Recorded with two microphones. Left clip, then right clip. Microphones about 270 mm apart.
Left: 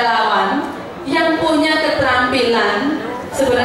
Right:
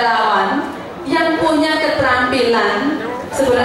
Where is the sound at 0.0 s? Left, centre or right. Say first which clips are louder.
Even; centre.